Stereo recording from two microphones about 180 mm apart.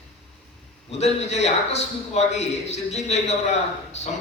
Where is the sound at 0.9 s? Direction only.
35° left (ahead or behind).